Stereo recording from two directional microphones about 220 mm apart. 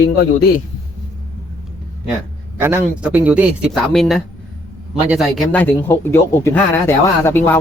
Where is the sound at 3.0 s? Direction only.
5° right (ahead or behind).